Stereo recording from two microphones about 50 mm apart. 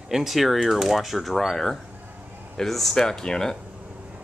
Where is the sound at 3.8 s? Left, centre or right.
Right.